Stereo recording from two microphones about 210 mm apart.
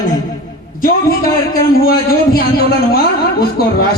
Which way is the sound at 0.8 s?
45° left (ahead or behind).